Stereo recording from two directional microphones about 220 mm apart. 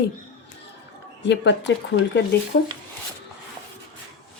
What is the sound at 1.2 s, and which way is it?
Speech, 55° left (ahead or behind).